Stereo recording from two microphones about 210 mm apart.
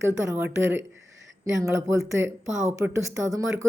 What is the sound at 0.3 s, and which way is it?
A woman's voice, 10° right (ahead or behind).